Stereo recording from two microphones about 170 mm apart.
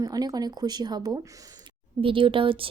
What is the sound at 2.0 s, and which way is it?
Speech, 30° right (ahead or behind).